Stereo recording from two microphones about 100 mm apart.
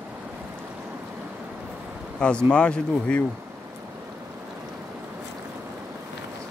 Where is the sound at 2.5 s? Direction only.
10° left (ahead or behind).